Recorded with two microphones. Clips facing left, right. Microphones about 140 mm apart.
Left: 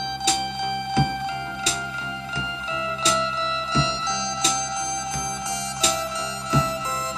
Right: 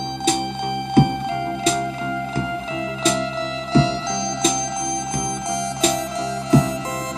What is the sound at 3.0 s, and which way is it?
Music, 50° right (ahead or behind).